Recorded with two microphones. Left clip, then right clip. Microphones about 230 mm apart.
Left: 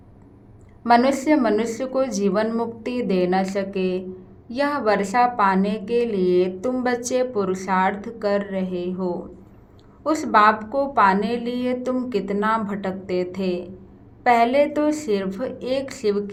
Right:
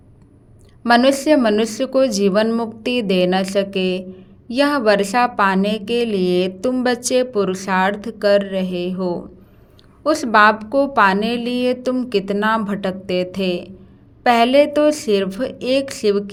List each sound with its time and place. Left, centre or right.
0.9 s a woman's voice: right